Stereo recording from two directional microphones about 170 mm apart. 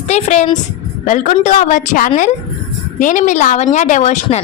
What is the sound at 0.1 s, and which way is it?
A woman's voice, 45° left (ahead or behind).